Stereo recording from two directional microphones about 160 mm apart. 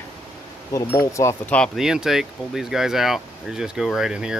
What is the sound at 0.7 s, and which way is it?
Speech, 20° left (ahead or behind).